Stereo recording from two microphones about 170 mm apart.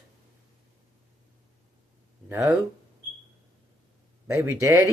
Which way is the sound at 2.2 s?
15° right (ahead or behind).